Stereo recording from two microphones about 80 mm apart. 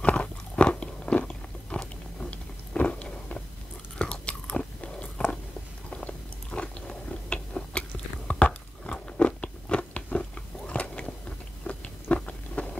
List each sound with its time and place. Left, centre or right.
0.0 s biting: centre